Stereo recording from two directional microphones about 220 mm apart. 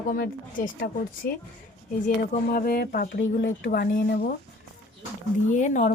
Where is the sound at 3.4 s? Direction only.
50° left (ahead or behind).